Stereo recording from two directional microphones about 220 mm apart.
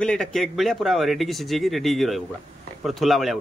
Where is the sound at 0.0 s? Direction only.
5° left (ahead or behind).